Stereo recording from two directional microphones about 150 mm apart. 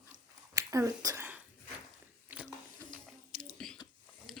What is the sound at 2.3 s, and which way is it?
Water, 10° right (ahead or behind).